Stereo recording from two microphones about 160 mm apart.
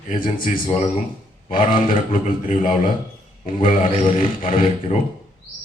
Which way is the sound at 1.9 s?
35° left (ahead or behind).